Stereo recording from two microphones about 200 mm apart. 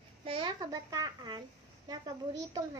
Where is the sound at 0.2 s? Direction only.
25° right (ahead or behind).